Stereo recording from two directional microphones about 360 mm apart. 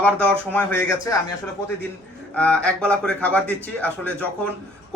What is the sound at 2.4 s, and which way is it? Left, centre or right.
Speech, centre.